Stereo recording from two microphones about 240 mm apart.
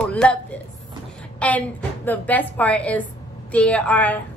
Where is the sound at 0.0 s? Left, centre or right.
Centre.